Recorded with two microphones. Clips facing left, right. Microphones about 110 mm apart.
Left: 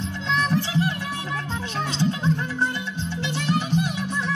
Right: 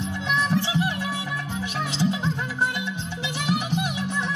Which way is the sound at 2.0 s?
15° right (ahead or behind).